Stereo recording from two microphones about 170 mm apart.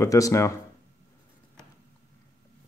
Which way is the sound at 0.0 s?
20° left (ahead or behind).